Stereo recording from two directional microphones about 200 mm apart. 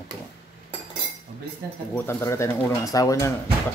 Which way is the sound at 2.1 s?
15° left (ahead or behind).